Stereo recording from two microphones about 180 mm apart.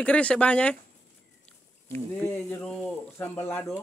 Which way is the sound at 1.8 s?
15° left (ahead or behind).